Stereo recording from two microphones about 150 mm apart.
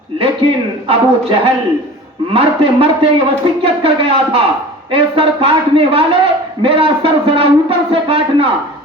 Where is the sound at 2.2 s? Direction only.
40° right (ahead or behind).